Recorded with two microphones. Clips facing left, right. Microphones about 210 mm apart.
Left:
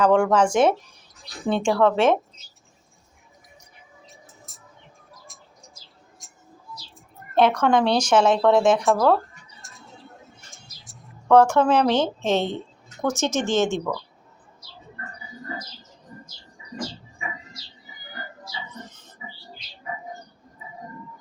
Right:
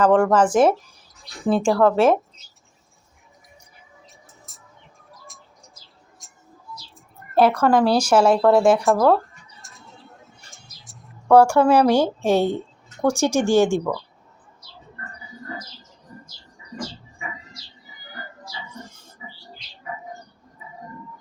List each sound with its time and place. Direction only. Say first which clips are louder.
0.0 s speech: right 2 dB; 5° right (ahead or behind)
4.0 s a sound: left 1 dB; centre (ahead or behind)
6.2 s bird: even; centre (ahead or behind)
7.3 s speech: right 2 dB; 5° right (ahead or behind)
9.0 s bird: right 2 dB; centre (ahead or behind)
11.3 s speech: right 2 dB; 10° right (ahead or behind)
18.7 s music: right 1 dB; 10° right (ahead or behind)